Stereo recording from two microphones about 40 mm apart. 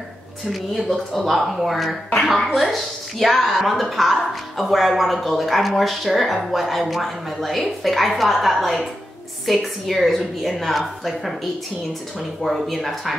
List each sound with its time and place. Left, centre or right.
0.5 s speech: centre
12.4 s speech: centre